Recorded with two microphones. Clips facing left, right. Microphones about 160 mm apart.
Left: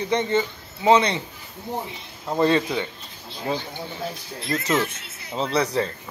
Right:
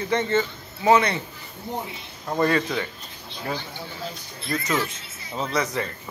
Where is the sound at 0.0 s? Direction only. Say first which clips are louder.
Left 1 dB; 15° left (ahead or behind).